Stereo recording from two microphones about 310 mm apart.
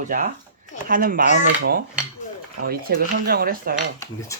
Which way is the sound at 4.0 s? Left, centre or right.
Centre.